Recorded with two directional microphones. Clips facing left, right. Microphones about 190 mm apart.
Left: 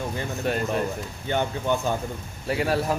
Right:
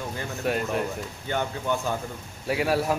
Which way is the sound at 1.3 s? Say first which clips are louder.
Left 3 dB; 25° left (ahead or behind).